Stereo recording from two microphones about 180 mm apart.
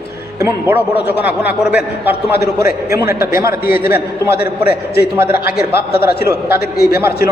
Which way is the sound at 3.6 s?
55° left (ahead or behind).